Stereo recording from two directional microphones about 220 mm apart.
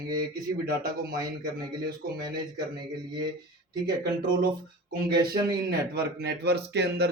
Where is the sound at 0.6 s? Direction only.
40° right (ahead or behind).